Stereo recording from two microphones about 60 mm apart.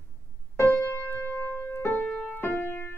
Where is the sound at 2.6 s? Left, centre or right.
Left.